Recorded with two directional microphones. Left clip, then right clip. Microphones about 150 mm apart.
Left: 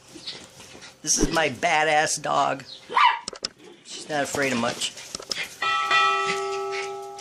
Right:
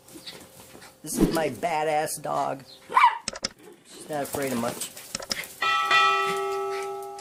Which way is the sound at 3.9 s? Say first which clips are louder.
Left 4 dB; 5° right (ahead or behind).